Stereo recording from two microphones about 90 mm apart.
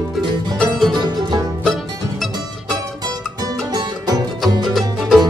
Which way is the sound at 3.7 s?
45° right (ahead or behind).